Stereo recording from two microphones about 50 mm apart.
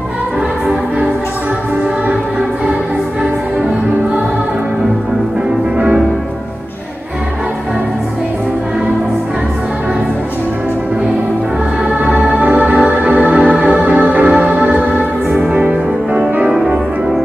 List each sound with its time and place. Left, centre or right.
12.1 s music: right
14.2 s music: centre
14.5 s music: right
16.4 s music: centre